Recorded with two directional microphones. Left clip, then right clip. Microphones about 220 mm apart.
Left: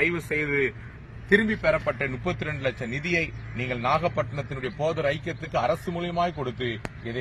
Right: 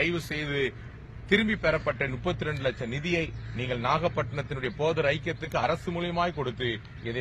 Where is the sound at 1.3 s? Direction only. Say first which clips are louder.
Left 4 dB; 35° right (ahead or behind).